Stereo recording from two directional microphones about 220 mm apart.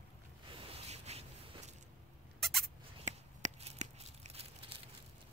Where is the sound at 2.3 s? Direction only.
Centre (ahead or behind).